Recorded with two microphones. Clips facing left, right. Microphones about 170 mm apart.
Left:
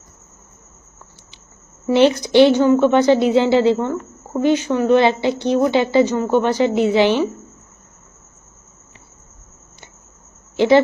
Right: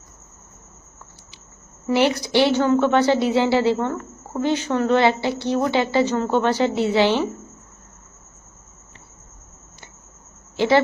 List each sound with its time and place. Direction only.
1.9 s a woman's voice: 25° left (ahead or behind)